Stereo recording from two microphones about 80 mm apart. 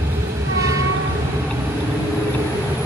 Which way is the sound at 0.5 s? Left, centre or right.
Right.